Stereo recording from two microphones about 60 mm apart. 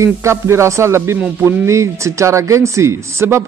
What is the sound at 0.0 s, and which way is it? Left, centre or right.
Speech, right.